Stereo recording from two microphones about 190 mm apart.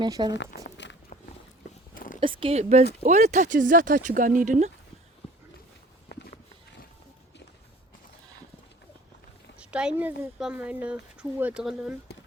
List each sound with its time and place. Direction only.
0.0 s speech: 20° right (ahead or behind)
0.3 s a sound: 70° left (ahead or behind)
2.2 s speech: 25° right (ahead or behind)
6.1 s walk: 60° left (ahead or behind)
9.6 s speech: 5° right (ahead or behind)